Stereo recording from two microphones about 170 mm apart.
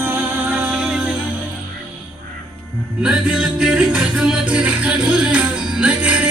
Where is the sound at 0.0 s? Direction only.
10° right (ahead or behind).